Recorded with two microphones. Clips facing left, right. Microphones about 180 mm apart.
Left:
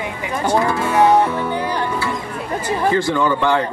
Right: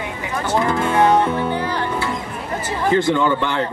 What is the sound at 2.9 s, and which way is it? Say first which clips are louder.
Speech: right 2 dB; 20° right (ahead or behind).